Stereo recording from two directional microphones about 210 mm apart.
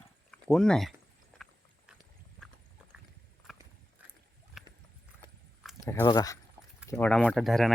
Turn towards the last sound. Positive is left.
turn(degrees=0)  # may be behind; listen again after turning